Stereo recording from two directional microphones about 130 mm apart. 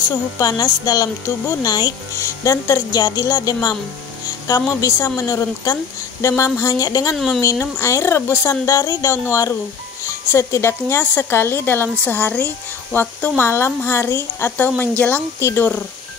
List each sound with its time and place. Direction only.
0.1 s a woman's voice: 30° left (ahead or behind)